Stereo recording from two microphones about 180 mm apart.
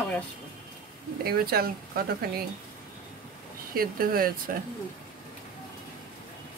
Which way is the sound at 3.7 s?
55° right (ahead or behind).